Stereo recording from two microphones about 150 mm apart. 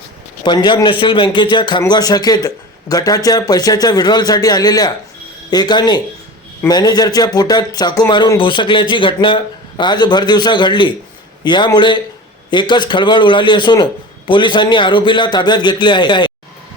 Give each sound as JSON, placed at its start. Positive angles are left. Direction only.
{"t": 0.4, "sound": "a man's voice", "side_deg": 30}